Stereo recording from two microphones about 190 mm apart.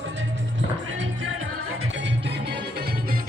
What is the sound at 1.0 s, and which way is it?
Music, 85° right.